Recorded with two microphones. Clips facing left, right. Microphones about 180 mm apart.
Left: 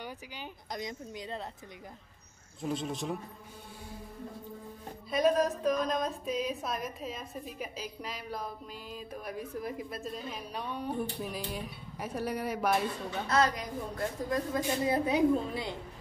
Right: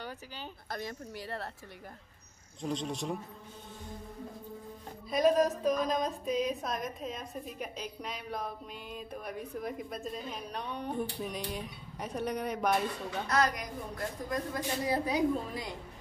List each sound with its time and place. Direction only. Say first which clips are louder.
0.0 s speech: even; 15° left (ahead or behind)
2.6 s a woman's voice: left 1 dB; 5° left (ahead or behind)
5.1 s a woman's voice: right 1 dB; centre (ahead or behind)
13.3 s a woman's voice: left 2 dB; 25° left (ahead or behind)